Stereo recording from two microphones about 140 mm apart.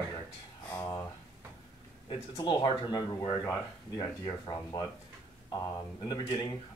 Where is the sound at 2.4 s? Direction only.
35° left (ahead or behind).